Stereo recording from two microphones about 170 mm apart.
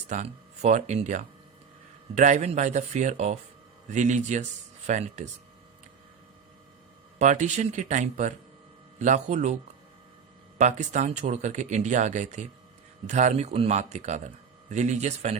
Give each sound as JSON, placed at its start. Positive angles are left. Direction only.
{"t": 0.1, "sound": "speech", "side_deg": -45}
{"t": 7.2, "sound": "speech", "side_deg": -45}
{"t": 10.6, "sound": "speech", "side_deg": -45}